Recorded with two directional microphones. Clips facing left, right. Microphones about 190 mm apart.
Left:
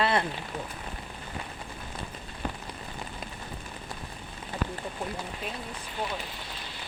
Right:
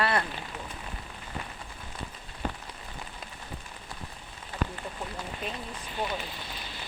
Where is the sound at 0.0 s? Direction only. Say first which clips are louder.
Left 2 dB; 20° left (ahead or behind).